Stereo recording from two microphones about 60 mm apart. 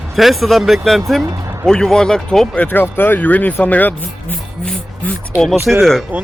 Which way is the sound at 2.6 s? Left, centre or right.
Left.